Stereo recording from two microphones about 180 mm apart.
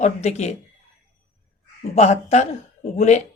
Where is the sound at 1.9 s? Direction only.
40° left (ahead or behind).